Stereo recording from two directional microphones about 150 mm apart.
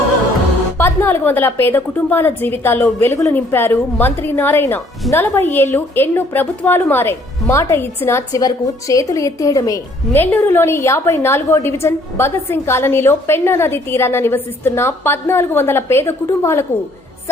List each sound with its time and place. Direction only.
0.8 s a woman's voice: 15° left (ahead or behind)